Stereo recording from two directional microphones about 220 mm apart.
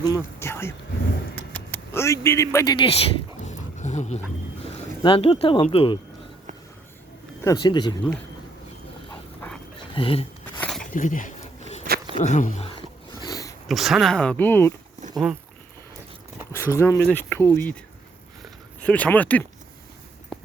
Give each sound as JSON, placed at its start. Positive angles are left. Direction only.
{"t": 0.0, "sound": "speech", "side_deg": 15}
{"t": 3.4, "sound": "dog", "side_deg": 35}
{"t": 5.0, "sound": "speech", "side_deg": 25}
{"t": 7.4, "sound": "speech", "side_deg": 20}
{"t": 9.9, "sound": "speech", "side_deg": 25}
{"t": 10.6, "sound": "a sound", "side_deg": 5}
{"t": 10.9, "sound": "a sound", "side_deg": 35}
{"t": 12.1, "sound": "speech", "side_deg": 35}
{"t": 13.2, "sound": "sniff", "side_deg": 15}
{"t": 13.7, "sound": "speech", "side_deg": 0}
{"t": 15.1, "sound": "speech", "side_deg": -5}
{"t": 16.5, "sound": "speech", "side_deg": 15}
{"t": 18.8, "sound": "speech", "side_deg": 5}